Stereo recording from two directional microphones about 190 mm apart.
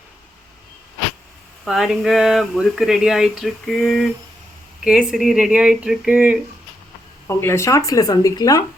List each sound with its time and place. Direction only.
1.6 s speech: centre (ahead or behind)
7.3 s speech: 15° left (ahead or behind)